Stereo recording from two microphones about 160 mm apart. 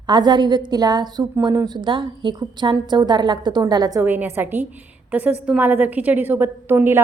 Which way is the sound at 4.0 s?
15° right (ahead or behind).